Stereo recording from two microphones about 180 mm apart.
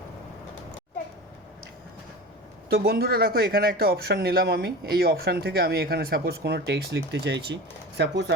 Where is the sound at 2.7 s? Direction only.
60° right (ahead or behind).